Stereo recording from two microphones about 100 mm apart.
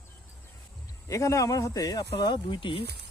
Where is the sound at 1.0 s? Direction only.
30° left (ahead or behind); by 2.8 s 55° left (ahead or behind).